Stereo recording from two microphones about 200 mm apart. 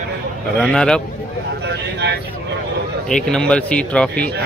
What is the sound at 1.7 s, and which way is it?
Speech, 60° right (ahead or behind).